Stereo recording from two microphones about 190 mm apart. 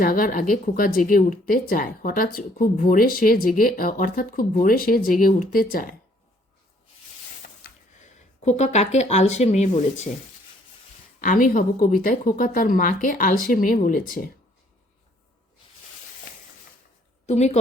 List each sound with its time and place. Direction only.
0.0 s speech: 45° left (ahead or behind)
7.6 s speech: 40° left (ahead or behind)
11.2 s speech: 45° left (ahead or behind)
17.2 s a woman's voice: 35° left (ahead or behind)